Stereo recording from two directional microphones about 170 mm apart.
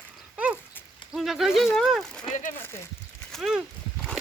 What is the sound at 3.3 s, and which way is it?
Speech, centre (ahead or behind).